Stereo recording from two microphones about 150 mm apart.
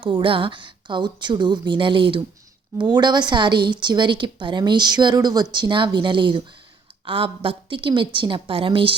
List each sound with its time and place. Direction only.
0.0 s a woman's voice: 35° right (ahead or behind)